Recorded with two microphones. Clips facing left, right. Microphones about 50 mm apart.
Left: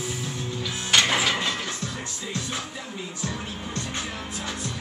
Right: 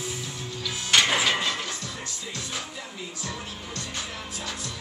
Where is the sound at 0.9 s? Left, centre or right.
Centre.